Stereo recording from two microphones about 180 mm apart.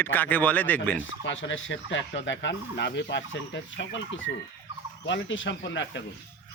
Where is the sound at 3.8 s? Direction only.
90° left.